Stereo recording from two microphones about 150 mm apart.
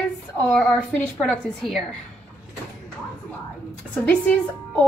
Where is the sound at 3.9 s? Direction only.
10° left (ahead or behind).